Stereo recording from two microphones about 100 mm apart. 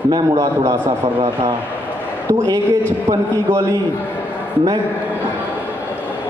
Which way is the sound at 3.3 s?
35° right (ahead or behind).